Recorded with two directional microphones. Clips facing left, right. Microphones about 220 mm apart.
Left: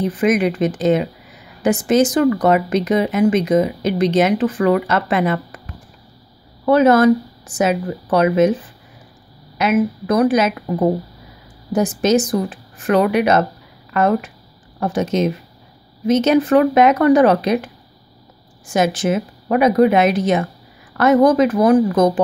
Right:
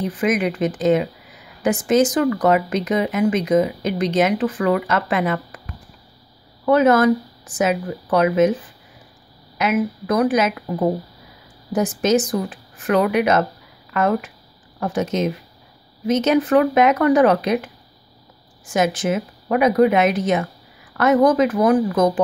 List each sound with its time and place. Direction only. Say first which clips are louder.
0.2 s speech: left 3 dB; 30° left (ahead or behind)
6.6 s speech: left 3 dB; 35° left (ahead or behind)
9.6 s speech: left 3 dB; 30° left (ahead or behind)
11.7 s speech: left 2 dB; 30° left (ahead or behind)
16.1 s speech: left 3 dB; 30° left (ahead or behind)
18.7 s speech: left 2 dB; 30° left (ahead or behind)